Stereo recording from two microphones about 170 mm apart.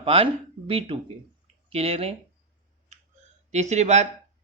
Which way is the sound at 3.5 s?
40° right (ahead or behind).